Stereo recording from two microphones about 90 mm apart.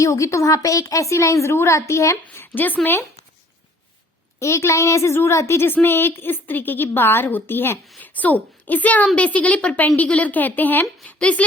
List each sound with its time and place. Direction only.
0.0 s a woman's voice: 35° left (ahead or behind)
2.2 s a woman's voice: 25° left (ahead or behind)
4.4 s a woman's voice: 35° left (ahead or behind); by 11.4 s 15° left (ahead or behind)